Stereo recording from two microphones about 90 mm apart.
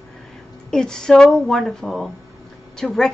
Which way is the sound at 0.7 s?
5° left (ahead or behind).